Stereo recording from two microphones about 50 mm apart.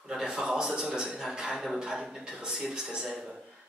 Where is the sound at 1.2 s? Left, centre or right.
Centre.